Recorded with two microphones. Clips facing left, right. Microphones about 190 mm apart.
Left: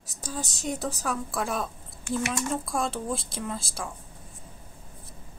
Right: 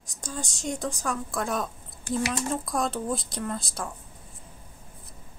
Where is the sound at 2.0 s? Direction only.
35° right (ahead or behind).